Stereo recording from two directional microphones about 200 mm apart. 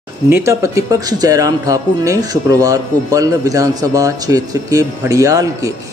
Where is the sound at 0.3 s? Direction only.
15° right (ahead or behind).